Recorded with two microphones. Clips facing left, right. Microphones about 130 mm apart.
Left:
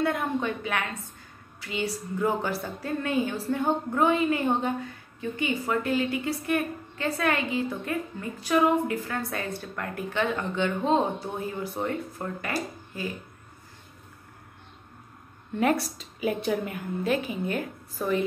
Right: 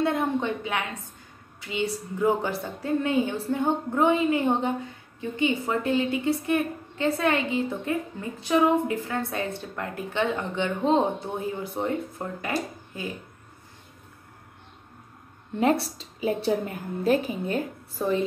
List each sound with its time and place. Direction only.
0.0 s a woman's voice: 25° right (ahead or behind)
15.6 s a woman's voice: 30° right (ahead or behind)